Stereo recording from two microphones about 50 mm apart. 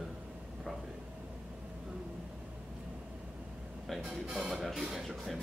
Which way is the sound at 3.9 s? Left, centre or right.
Centre.